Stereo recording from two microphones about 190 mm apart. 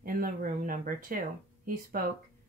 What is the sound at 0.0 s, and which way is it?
A woman's voice, 50° right (ahead or behind).